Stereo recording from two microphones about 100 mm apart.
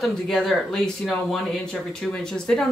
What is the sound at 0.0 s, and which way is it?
Speech, centre (ahead or behind).